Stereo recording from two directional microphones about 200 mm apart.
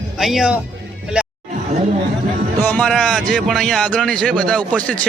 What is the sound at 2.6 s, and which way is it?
Speech, 5° left (ahead or behind).